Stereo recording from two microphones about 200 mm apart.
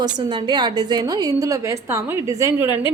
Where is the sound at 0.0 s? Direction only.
25° right (ahead or behind).